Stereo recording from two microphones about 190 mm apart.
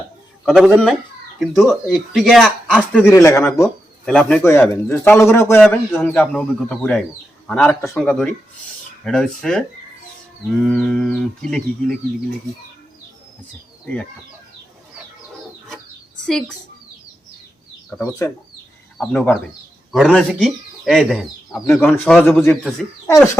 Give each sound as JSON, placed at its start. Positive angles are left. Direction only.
{"t": 0.4, "sound": "a man's voice", "side_deg": 0}
{"t": 4.0, "sound": "a man's voice", "side_deg": 5}
{"t": 10.7, "sound": "speech", "side_deg": 0}
{"t": 13.8, "sound": "speech", "side_deg": 5}
{"t": 16.2, "sound": "speech", "side_deg": 5}
{"t": 17.9, "sound": "a man's voice", "side_deg": 15}
{"t": 21.8, "sound": "a man's voice", "side_deg": 10}